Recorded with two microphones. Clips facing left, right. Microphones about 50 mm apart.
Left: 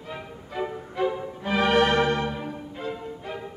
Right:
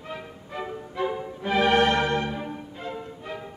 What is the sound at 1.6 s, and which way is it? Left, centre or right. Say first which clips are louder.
Music: even; left.